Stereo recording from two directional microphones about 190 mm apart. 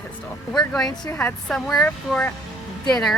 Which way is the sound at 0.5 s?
5° left (ahead or behind).